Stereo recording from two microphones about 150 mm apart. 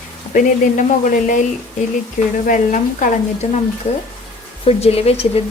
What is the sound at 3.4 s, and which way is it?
Speech, 45° left (ahead or behind).